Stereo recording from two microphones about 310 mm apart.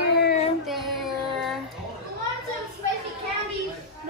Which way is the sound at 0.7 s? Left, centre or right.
Centre.